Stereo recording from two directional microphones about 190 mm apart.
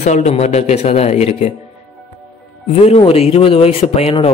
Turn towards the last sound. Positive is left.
turn(degrees=30)  # may be behind; listen again after turning